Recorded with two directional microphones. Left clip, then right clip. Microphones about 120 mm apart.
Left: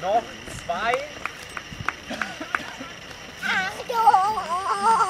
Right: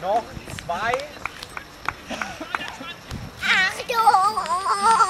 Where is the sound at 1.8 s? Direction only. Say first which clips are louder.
Even; 25° left (ahead or behind).